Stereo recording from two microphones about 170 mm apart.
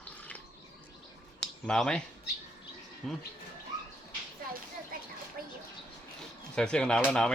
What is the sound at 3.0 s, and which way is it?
Speech, centre (ahead or behind).